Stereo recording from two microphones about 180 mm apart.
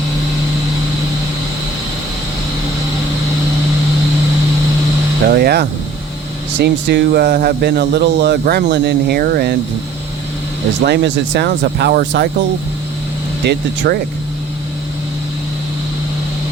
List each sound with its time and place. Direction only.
5.3 s speech: 60° right (ahead or behind)
6.6 s speech: 70° right (ahead or behind)
10.8 s speech: 65° right (ahead or behind)
13.4 s speech: 65° right (ahead or behind)